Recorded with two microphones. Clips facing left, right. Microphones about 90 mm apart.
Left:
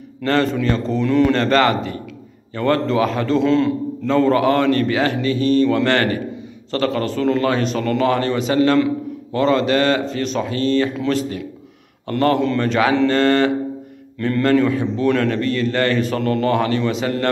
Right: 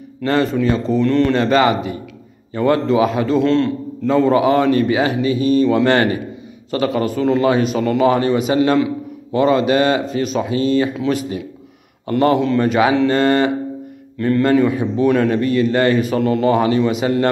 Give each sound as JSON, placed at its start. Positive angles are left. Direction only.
{"t": 0.2, "sound": "a man's voice", "side_deg": -10}
{"t": 1.3, "sound": "a man's voice", "side_deg": -10}
{"t": 4.1, "sound": "a man's voice", "side_deg": -15}